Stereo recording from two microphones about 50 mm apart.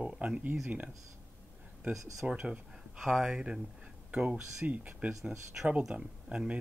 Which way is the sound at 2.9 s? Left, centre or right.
Centre.